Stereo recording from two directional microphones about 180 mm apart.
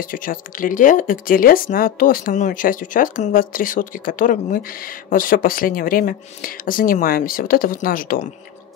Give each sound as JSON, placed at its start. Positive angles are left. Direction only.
{"t": 0.0, "sound": "speech", "side_deg": 50}